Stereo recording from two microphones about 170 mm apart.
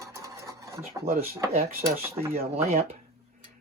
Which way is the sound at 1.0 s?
60° right (ahead or behind).